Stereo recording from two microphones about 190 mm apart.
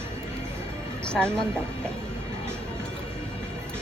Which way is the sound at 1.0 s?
5° left (ahead or behind).